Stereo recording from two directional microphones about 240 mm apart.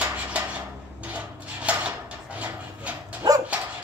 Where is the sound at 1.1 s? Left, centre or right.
Centre.